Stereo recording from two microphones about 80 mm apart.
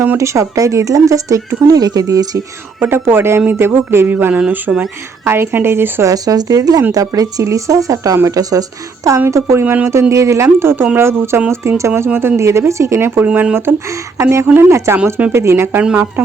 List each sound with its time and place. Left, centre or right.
0.2 s speech: right
2.8 s speech: right
6.1 s speech: right
9.3 s speech: right
15.8 s speech: centre